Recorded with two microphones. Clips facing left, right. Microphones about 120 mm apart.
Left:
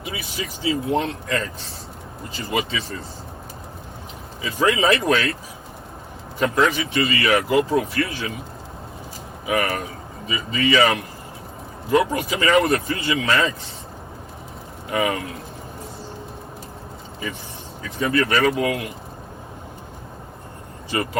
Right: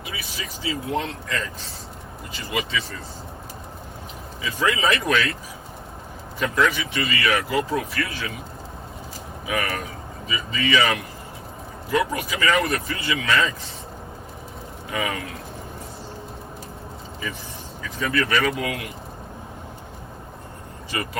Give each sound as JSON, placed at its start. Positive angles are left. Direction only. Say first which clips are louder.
{"t": 0.0, "sound": "speech", "louder": "left 4 dB", "side_deg": 30}
{"t": 2.5, "sound": "speech", "louder": "left 2 dB", "side_deg": 35}
{"t": 4.4, "sound": "speech", "louder": "left 4 dB", "side_deg": 30}
{"t": 6.4, "sound": "speech", "louder": "left 3 dB", "side_deg": 40}
{"t": 9.5, "sound": "speech", "louder": "left 4 dB", "side_deg": 30}
{"t": 14.8, "sound": "speech", "louder": "left 5 dB", "side_deg": 30}
{"t": 18.0, "sound": "speech", "louder": "left 3 dB", "side_deg": 30}
{"t": 20.9, "sound": "speech", "louder": "left 5 dB", "side_deg": 35}